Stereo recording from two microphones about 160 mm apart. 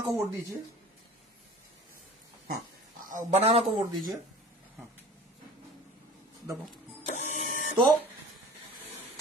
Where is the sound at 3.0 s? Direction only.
55° right (ahead or behind).